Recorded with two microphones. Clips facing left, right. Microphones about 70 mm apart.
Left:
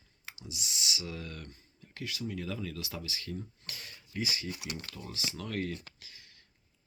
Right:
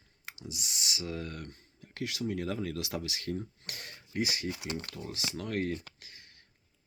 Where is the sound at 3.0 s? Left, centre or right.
Right.